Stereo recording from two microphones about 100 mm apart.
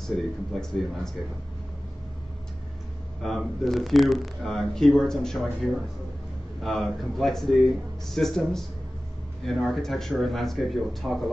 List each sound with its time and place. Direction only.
0.0 s speech: 5° left (ahead or behind)
3.2 s speech: centre (ahead or behind)